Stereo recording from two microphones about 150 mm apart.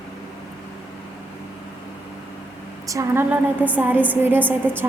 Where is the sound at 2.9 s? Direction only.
20° right (ahead or behind).